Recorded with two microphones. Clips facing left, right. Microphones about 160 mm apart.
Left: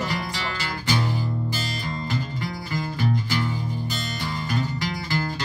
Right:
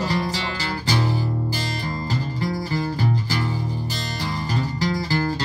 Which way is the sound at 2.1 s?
35° right (ahead or behind).